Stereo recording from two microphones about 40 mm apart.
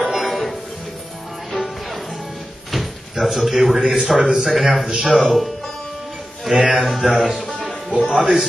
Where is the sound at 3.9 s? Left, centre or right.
Centre.